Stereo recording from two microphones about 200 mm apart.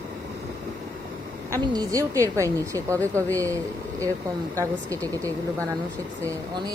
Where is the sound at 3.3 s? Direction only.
15° right (ahead or behind).